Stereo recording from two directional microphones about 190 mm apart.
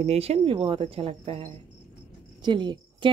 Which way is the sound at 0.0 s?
35° right (ahead or behind).